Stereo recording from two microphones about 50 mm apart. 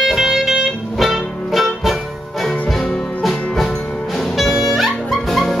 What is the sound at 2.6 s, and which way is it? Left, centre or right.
Music, centre.